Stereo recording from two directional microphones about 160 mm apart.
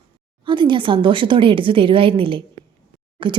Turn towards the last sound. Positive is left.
turn(degrees=-30)  # may be behind; listen again after turning